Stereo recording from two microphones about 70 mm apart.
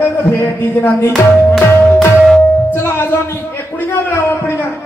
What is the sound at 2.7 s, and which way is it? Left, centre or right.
A man's voice, left.